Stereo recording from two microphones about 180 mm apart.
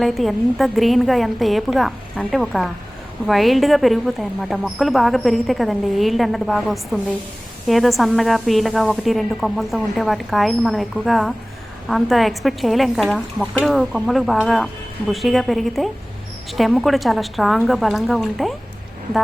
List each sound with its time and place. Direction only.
0.0 s a woman's voice: centre (ahead or behind)